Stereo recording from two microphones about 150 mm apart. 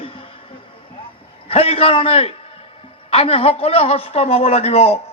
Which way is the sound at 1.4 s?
40° left (ahead or behind).